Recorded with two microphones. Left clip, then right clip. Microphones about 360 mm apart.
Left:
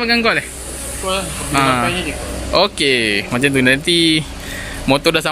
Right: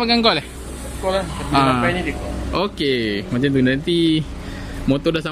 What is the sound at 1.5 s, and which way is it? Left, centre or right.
Speech, centre.